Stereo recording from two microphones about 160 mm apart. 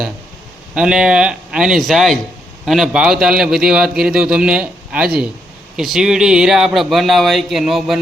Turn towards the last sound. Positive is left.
turn(degrees=0)  # may be behind; listen again after turning